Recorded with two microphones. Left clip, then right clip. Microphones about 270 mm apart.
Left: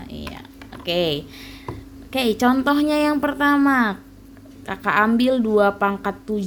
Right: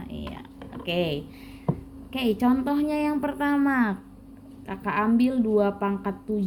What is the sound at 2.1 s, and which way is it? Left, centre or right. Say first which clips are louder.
A woman's voice: left 6 dB; left.